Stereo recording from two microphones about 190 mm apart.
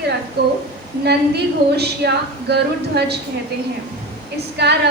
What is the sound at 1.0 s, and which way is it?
A woman's voice, 60° right (ahead or behind).